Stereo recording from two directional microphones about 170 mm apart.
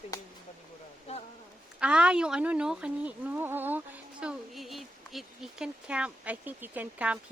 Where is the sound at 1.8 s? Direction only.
5° right (ahead or behind).